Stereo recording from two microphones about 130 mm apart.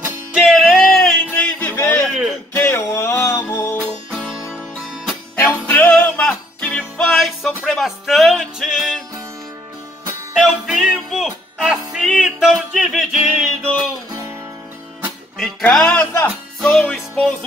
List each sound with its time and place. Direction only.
0.3 s music: centre (ahead or behind); by 2.0 s 15° left (ahead or behind)
2.0 s a sound: centre (ahead or behind)
2.5 s music: 15° left (ahead or behind)
4.1 s music: centre (ahead or behind)
5.7 s music: 10° left (ahead or behind)
10.3 s music: 5° right (ahead or behind)
15.3 s music: 5° left (ahead or behind)